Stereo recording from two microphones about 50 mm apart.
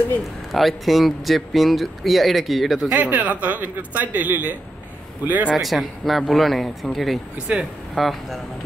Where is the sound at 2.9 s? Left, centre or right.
Right.